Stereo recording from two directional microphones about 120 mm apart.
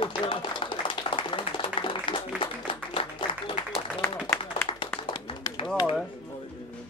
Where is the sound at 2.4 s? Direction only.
45° left (ahead or behind).